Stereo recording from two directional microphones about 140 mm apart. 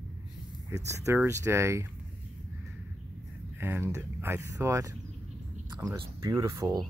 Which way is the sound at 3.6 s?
15° right (ahead or behind).